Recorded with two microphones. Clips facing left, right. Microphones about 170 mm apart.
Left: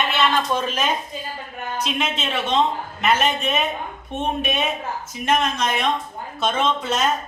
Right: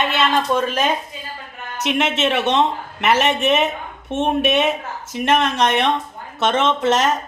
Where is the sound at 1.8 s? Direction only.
75° right (ahead or behind).